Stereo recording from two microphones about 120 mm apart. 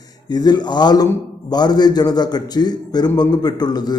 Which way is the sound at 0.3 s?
35° left (ahead or behind).